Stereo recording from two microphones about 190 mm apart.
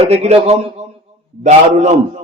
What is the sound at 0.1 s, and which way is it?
Speech, 35° right (ahead or behind).